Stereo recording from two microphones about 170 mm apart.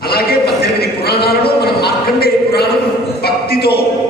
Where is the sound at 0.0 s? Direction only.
65° left (ahead or behind).